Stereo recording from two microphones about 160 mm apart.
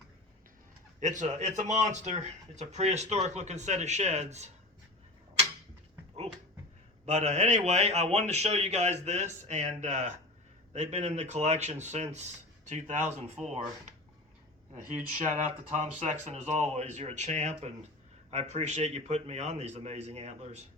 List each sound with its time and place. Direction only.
0.9 s speech: 50° right (ahead or behind)
7.0 s speech: 45° right (ahead or behind)
14.9 s speech: 50° right (ahead or behind)